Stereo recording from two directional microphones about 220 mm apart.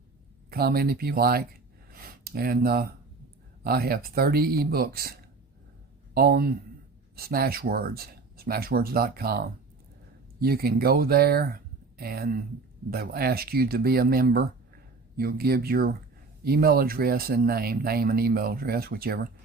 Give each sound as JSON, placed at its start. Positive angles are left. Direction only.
{"t": 0.5, "sound": "speech", "side_deg": -40}
{"t": 1.9, "sound": "a sound", "side_deg": -40}
{"t": 3.6, "sound": "speech", "side_deg": -45}
{"t": 6.1, "sound": "speech", "side_deg": -45}
{"t": 10.4, "sound": "speech", "side_deg": -45}